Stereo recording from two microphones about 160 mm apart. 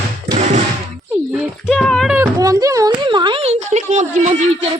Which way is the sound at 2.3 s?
20° right (ahead or behind).